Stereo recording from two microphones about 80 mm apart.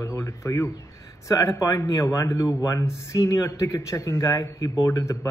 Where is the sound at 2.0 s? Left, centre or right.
Left.